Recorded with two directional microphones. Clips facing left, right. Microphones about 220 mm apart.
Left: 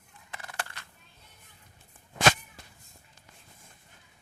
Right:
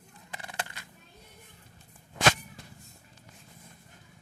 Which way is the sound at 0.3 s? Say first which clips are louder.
Right 1 dB; 20° right (ahead or behind).